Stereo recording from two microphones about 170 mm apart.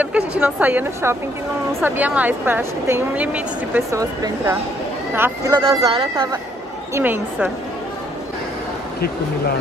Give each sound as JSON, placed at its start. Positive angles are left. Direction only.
{"t": 0.3, "sound": "speech", "side_deg": -10}
{"t": 4.0, "sound": "speech", "side_deg": -20}
{"t": 6.9, "sound": "speech", "side_deg": -10}